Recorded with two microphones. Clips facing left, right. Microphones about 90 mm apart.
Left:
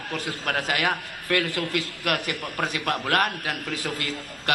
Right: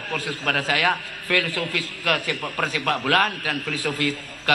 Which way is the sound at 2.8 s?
35° right (ahead or behind).